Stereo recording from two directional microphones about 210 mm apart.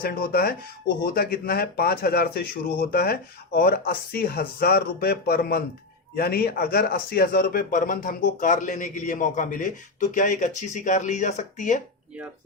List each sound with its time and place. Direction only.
0.0 s speech: 45° left (ahead or behind)